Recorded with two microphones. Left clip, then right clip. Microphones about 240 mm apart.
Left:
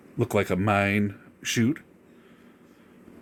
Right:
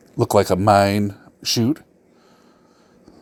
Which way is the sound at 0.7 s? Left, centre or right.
Centre.